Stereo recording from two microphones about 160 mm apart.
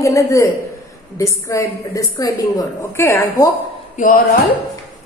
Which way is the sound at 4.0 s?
55° left (ahead or behind).